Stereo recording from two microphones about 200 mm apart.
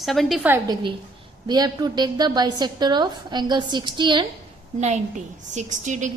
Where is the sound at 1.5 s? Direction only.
20° right (ahead or behind).